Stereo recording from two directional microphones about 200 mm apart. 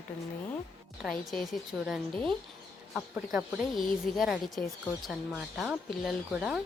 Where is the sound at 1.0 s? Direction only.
Centre (ahead or behind).